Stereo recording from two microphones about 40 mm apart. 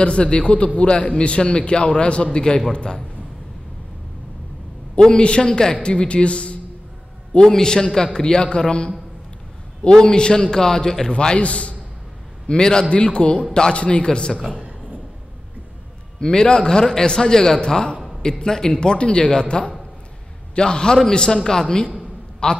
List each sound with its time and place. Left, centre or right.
0.0 s a man's voice: left
4.9 s a man's voice: left
7.3 s a man's voice: centre
11.1 s a man's voice: left
12.4 s a man's voice: centre
16.2 s a man's voice: centre